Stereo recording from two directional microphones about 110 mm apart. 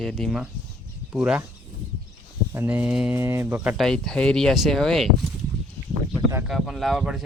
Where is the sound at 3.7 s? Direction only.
5° left (ahead or behind).